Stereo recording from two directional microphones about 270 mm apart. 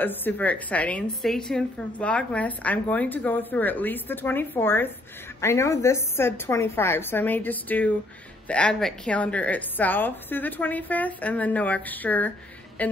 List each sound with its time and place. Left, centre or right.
0.0 s a woman's voice: centre